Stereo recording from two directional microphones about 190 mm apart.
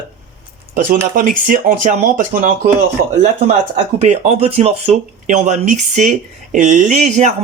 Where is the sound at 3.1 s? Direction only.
40° right (ahead or behind).